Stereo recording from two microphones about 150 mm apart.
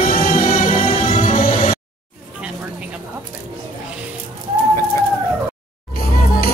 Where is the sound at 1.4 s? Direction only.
70° left (ahead or behind).